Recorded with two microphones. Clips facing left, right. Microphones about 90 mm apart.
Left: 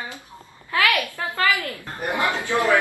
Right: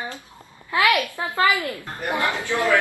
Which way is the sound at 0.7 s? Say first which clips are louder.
Right 2 dB; 20° right (ahead or behind).